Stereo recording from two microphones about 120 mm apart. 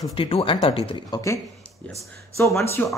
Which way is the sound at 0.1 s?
50° left (ahead or behind).